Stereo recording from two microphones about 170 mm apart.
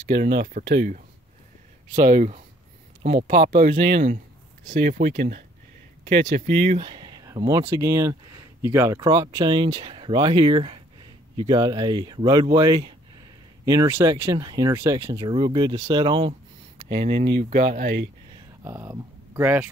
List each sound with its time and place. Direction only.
0.1 s speech: 80° right
2.0 s speech: 45° right (ahead or behind)
6.2 s speech: 30° right (ahead or behind)
15.2 s speech: 30° right (ahead or behind)
17.1 s speech: 75° right (ahead or behind)
17.4 s speech: 45° right (ahead or behind)
17.7 s speech: 55° right (ahead or behind)
18.6 s speech: 15° right (ahead or behind)